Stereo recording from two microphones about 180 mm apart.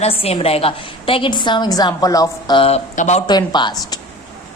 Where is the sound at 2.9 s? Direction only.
40° left (ahead or behind).